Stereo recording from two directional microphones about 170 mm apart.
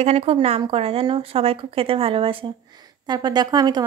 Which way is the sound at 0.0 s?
35° right (ahead or behind).